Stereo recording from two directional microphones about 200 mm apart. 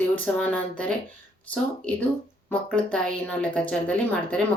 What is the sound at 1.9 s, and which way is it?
A woman's voice, 5° left (ahead or behind).